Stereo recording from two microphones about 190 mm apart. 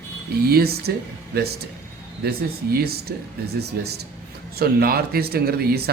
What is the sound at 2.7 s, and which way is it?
Speech, 55° right (ahead or behind).